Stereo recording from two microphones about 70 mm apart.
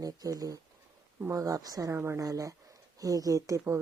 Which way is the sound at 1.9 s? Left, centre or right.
Right.